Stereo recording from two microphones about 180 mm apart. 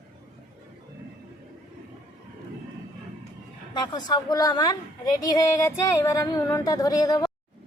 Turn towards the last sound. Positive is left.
turn(degrees=20)  # may be behind; listen again after turning